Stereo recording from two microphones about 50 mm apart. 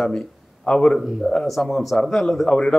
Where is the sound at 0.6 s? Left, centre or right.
Centre.